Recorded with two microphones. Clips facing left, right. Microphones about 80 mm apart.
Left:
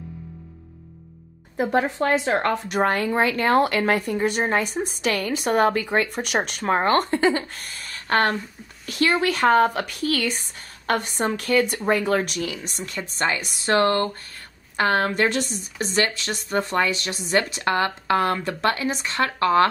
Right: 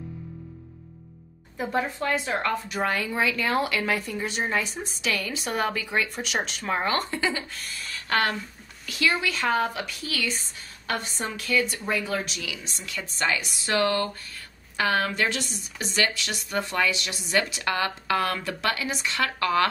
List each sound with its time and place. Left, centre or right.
2.2 s speech: left
2.8 s a woman's voice: left